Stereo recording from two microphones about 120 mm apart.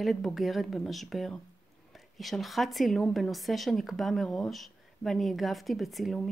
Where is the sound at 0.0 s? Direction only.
Centre (ahead or behind).